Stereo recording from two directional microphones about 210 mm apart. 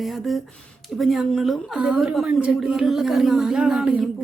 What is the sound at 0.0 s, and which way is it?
A woman's voice, centre (ahead or behind).